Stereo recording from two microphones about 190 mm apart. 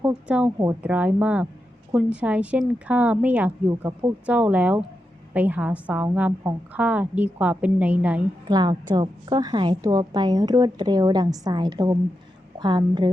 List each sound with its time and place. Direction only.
0.0 s a woman's voice: 5° right (ahead or behind)
8.4 s a woman's voice: 20° right (ahead or behind)